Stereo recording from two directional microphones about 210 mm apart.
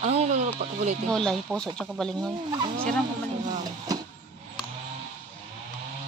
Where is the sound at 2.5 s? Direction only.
20° right (ahead or behind).